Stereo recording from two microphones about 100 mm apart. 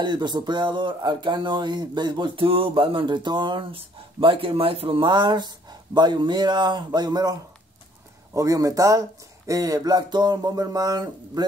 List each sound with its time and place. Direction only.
0.0 s speech: 50° right (ahead or behind)